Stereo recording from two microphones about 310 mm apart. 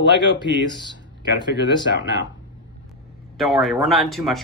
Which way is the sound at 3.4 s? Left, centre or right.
Centre.